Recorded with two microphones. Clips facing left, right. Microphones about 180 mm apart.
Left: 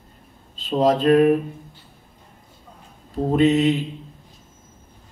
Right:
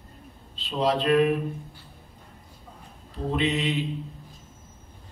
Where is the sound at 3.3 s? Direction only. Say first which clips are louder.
Left 9 dB; 45° left (ahead or behind).